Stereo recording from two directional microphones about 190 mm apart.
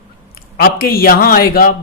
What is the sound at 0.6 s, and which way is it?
A man's voice, 50° left (ahead or behind).